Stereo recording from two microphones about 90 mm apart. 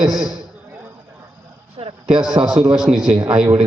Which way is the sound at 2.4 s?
90° right.